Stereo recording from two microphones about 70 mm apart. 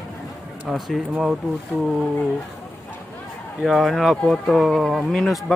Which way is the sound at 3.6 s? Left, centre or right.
Centre.